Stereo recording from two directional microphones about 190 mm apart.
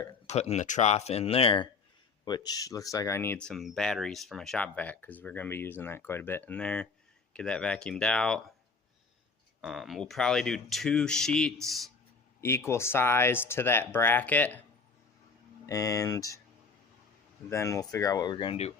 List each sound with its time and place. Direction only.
0.3 s speech: 35° left (ahead or behind); by 8.4 s 5° left (ahead or behind)
9.6 s speech: centre (ahead or behind)
12.4 s speech: 15° left (ahead or behind)
15.6 s speech: 15° left (ahead or behind)
17.5 s speech: 15° left (ahead or behind)